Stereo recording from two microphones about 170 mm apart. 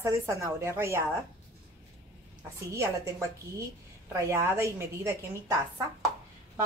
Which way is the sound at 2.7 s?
15° right (ahead or behind).